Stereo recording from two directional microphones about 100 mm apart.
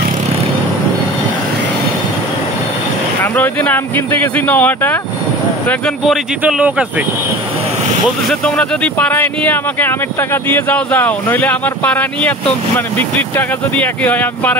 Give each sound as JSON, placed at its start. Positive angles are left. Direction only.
{"t": 3.3, "sound": "speech", "side_deg": 20}
{"t": 6.4, "sound": "speech", "side_deg": -15}
{"t": 8.3, "sound": "speech", "side_deg": 10}